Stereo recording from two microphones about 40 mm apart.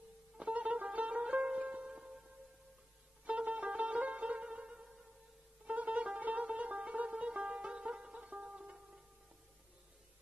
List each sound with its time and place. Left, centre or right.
0.4 s music: right
3.3 s music: right